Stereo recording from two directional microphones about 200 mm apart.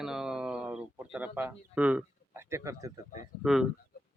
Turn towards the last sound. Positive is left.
turn(degrees=0)  # may be behind; listen again after turning